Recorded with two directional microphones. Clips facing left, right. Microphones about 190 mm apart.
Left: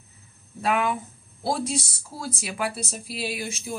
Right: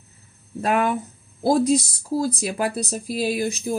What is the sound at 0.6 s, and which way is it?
Speech, 40° right (ahead or behind).